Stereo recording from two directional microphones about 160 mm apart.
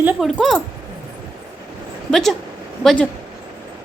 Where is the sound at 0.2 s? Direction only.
Centre (ahead or behind).